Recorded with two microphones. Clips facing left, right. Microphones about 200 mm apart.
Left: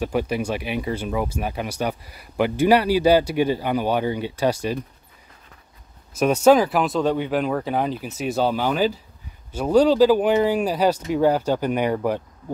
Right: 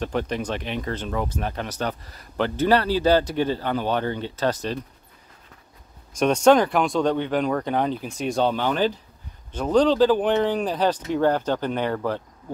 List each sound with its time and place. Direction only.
0.0 s speech: 10° left (ahead or behind)
6.1 s speech: 5° left (ahead or behind)